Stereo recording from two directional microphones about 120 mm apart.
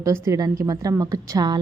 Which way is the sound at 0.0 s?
30° right (ahead or behind).